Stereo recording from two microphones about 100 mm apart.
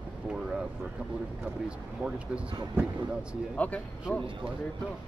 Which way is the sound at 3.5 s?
15° left (ahead or behind).